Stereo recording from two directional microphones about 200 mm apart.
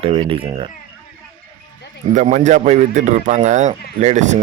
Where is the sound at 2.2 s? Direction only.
35° right (ahead or behind).